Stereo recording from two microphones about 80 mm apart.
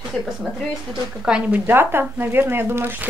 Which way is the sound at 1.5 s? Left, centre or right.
Right.